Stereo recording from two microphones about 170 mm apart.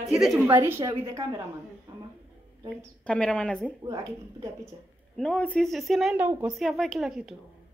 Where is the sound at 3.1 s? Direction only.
5° left (ahead or behind).